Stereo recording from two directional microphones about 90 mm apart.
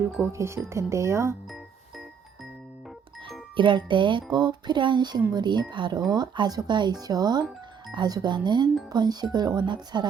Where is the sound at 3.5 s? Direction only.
65° right (ahead or behind).